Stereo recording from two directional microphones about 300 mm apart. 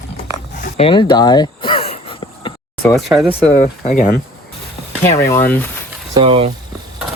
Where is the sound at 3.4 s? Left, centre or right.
Left.